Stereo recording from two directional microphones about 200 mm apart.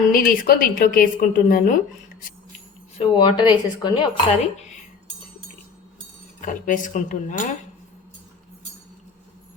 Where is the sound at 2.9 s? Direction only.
30° left (ahead or behind).